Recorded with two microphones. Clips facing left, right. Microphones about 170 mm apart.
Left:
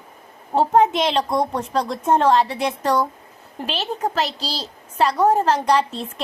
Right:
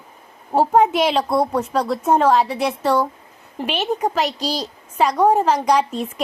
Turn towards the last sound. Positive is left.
turn(degrees=-10)  # may be behind; listen again after turning